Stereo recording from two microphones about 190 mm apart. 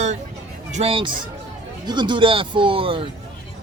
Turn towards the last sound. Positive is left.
turn(degrees=-30)  # may be behind; listen again after turning